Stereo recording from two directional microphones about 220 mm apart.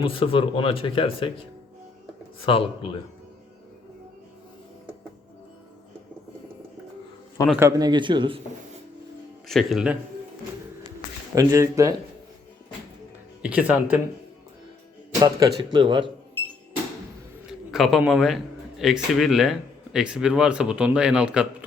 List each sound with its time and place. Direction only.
0.0 s speech: 25° left (ahead or behind)
2.5 s speech: 25° left (ahead or behind)
7.6 s speech: 20° right (ahead or behind)
9.5 s speech: centre (ahead or behind)
11.3 s speech: 15° right (ahead or behind)
13.4 s speech: 5° right (ahead or behind)
15.2 s speech: 20° right (ahead or behind)
17.7 s speech: centre (ahead or behind)